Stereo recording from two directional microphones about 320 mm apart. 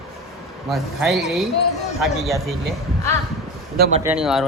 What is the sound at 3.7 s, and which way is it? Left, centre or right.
Speech, right.